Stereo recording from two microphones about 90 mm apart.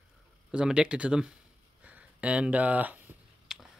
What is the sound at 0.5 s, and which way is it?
Speech, 10° right (ahead or behind).